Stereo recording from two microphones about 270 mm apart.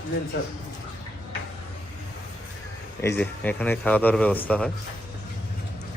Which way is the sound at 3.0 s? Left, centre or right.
Centre.